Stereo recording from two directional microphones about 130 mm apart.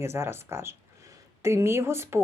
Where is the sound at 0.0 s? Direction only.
20° right (ahead or behind).